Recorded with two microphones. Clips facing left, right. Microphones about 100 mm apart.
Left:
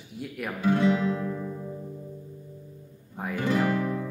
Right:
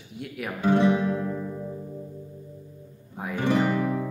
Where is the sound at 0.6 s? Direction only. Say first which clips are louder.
Right 2 dB; 25° right (ahead or behind).